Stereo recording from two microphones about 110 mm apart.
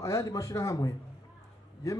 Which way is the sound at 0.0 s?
30° left (ahead or behind).